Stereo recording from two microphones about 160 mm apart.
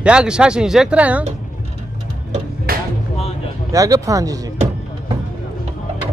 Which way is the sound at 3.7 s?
20° right (ahead or behind).